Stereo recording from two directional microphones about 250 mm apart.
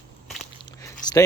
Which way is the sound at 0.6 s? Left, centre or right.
Centre.